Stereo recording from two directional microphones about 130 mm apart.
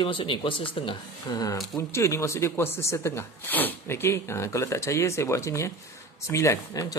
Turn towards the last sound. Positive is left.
turn(degrees=20)  # may be behind; listen again after turning